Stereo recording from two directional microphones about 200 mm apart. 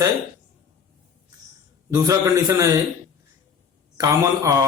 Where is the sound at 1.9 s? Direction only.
15° right (ahead or behind).